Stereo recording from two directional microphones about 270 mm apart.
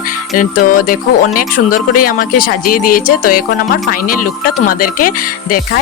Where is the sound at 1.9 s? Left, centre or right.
Left.